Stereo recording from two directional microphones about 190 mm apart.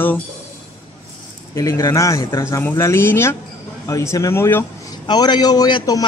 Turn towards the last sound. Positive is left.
turn(degrees=20)  # may be behind; listen again after turning